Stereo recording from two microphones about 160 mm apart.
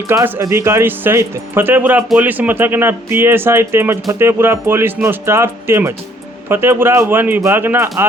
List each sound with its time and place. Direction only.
0.1 s speech: 15° right (ahead or behind)